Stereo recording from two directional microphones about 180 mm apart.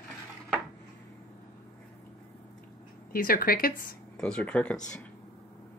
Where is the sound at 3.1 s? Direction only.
50° left (ahead or behind).